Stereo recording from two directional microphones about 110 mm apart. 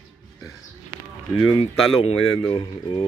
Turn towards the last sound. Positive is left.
turn(degrees=55)  # may be behind; listen again after turning